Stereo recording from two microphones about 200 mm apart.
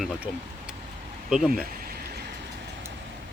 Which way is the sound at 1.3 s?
5° right (ahead or behind).